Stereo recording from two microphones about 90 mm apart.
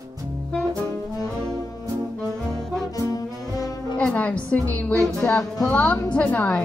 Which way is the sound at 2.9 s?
40° left (ahead or behind).